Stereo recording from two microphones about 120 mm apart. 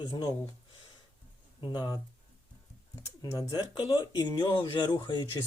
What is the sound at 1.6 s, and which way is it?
Speech, 40° left (ahead or behind).